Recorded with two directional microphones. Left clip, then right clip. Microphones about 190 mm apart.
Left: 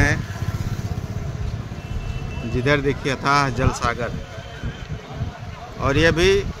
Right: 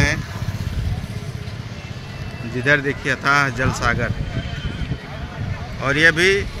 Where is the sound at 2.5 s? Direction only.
15° left (ahead or behind).